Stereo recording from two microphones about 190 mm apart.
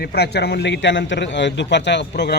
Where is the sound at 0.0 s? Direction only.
60° left (ahead or behind).